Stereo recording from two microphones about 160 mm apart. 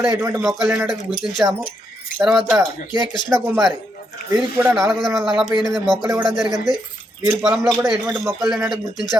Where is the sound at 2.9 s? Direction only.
30° left (ahead or behind).